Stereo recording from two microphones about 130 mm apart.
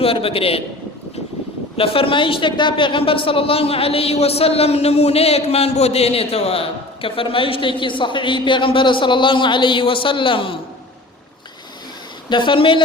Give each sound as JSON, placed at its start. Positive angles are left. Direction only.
{"t": 0.0, "sound": "a man's voice", "side_deg": 45}
{"t": 1.7, "sound": "a man's voice", "side_deg": 45}
{"t": 12.3, "sound": "speech", "side_deg": 40}